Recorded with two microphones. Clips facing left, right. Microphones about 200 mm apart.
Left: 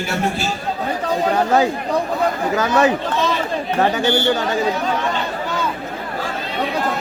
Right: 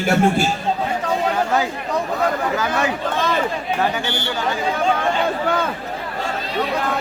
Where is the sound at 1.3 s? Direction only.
35° left (ahead or behind).